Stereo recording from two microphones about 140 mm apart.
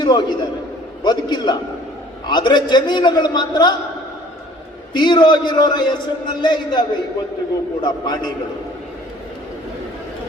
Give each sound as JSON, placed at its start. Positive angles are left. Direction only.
{"t": 0.0, "sound": "a man's voice", "side_deg": 30}
{"t": 4.9, "sound": "a man's voice", "side_deg": 30}